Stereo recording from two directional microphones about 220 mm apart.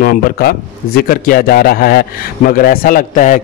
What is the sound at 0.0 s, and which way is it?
A man's voice, 45° left (ahead or behind).